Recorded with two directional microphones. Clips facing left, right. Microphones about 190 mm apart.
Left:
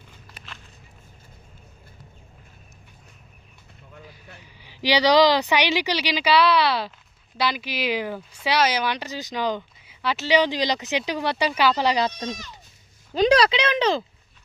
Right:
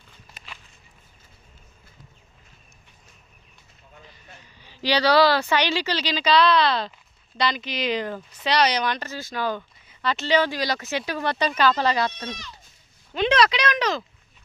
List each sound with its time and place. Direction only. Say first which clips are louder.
4.4 s speech: left 1 dB; 10° left (ahead or behind)
13.1 s speech: left 3 dB; 35° left (ahead or behind)